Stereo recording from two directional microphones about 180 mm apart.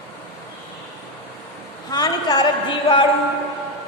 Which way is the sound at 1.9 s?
20° left (ahead or behind).